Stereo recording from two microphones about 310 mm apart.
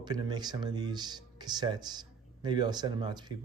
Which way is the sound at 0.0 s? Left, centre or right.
Centre.